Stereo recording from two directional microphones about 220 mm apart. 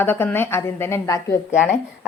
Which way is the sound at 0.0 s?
10° left (ahead or behind).